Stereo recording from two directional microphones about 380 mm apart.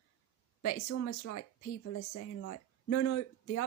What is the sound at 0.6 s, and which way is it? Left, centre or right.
Speech, left.